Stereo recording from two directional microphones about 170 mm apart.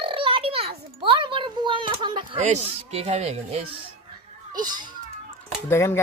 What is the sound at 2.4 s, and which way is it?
Speech, 40° right (ahead or behind).